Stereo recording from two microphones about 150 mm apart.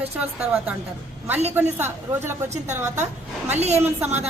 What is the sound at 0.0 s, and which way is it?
Speech, 10° right (ahead or behind).